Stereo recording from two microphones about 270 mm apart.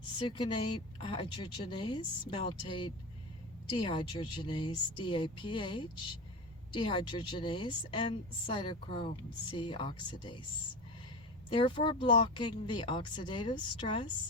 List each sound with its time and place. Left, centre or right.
0.2 s a woman's voice: centre
11.4 s a woman's voice: centre